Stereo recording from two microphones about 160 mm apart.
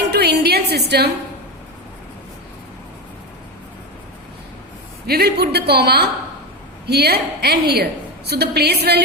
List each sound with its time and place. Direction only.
0.1 s music: 90° right
5.0 s a woman's voice: 85° right